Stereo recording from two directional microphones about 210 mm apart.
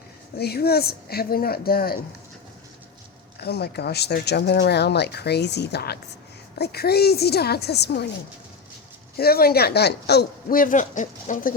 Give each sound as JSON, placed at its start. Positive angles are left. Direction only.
{"t": 0.3, "sound": "speech", "side_deg": 50}
{"t": 3.4, "sound": "speech", "side_deg": 50}
{"t": 9.1, "sound": "speech", "side_deg": 45}